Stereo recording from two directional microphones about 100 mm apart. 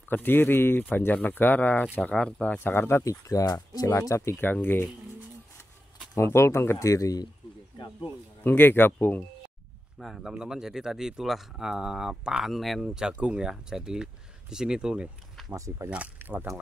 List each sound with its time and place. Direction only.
0.1 s speech: 20° left (ahead or behind)
6.1 s speech: 25° left (ahead or behind)
8.5 s speech: 20° left (ahead or behind)
9.9 s speech: centre (ahead or behind)
15.5 s speech: 35° right (ahead or behind)
16.2 s speech: 20° right (ahead or behind)